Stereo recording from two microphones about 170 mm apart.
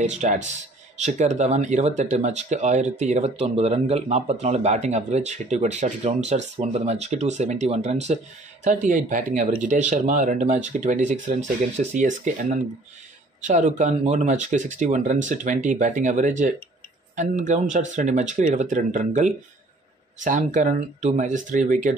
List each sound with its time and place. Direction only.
0.0 s speech: 45° right (ahead or behind)